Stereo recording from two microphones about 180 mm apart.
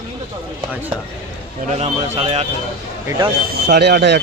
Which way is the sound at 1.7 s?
35° right (ahead or behind).